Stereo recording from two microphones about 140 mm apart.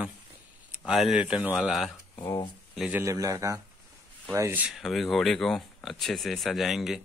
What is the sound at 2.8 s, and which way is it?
Speech, 10° right (ahead or behind).